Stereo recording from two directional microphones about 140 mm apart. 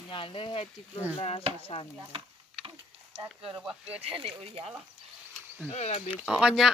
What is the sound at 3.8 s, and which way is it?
Speech, 45° right (ahead or behind).